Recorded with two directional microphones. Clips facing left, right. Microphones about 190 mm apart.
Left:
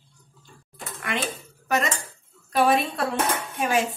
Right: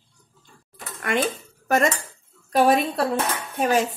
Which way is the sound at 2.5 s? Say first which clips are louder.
Right 3 dB; 45° right (ahead or behind).